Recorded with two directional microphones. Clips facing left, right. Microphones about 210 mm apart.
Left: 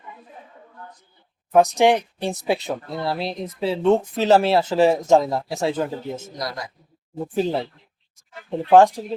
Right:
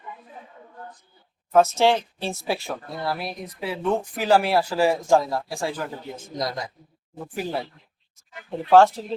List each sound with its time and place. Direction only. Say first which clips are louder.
1.5 s speech: left 2 dB; 15° left (ahead or behind)
7.3 s speech: left 6 dB; 25° left (ahead or behind)